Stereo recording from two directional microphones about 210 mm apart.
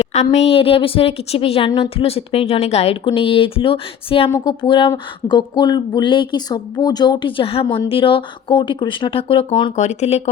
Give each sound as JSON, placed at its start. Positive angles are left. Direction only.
{"t": 0.1, "sound": "a woman's voice", "side_deg": 35}